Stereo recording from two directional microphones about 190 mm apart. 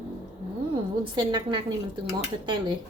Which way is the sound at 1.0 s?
25° right (ahead or behind).